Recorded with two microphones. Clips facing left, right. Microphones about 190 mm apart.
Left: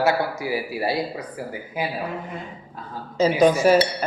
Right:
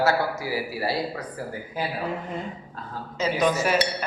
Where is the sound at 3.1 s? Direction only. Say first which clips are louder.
Left 6 dB; 35° left (ahead or behind).